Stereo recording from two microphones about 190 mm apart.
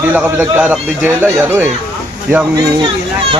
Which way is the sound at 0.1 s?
10° right (ahead or behind).